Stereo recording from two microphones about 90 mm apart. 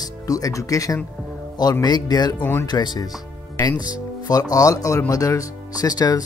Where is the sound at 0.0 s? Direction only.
40° left (ahead or behind).